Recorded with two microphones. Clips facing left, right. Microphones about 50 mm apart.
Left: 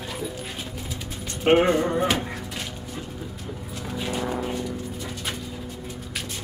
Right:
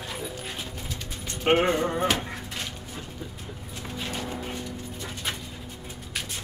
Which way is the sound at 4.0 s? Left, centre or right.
Centre.